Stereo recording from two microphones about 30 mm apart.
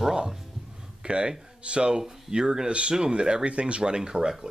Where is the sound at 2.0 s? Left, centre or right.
Right.